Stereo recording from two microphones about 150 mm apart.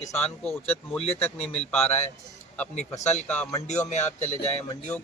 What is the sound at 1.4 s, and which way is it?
Speech, 45° left (ahead or behind).